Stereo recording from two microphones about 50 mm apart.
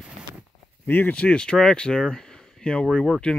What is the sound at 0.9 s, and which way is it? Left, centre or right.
Speech, left.